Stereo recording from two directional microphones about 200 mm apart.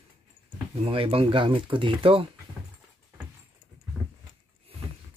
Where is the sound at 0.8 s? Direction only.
25° right (ahead or behind).